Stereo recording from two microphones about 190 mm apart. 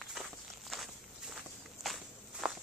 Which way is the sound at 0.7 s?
Centre (ahead or behind).